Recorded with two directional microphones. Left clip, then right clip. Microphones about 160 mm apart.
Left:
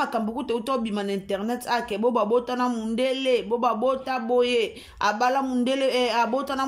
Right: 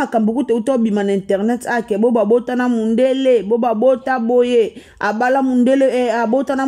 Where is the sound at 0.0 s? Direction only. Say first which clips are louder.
Right 9 dB; 45° right (ahead or behind).